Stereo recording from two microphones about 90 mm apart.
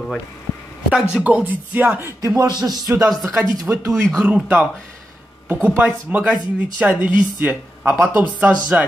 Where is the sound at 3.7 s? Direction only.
30° right (ahead or behind).